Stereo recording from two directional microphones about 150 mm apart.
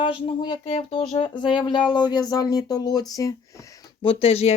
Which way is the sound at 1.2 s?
30° left (ahead or behind).